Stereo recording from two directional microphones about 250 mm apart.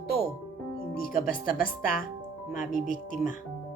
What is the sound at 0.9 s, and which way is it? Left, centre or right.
Speech, left.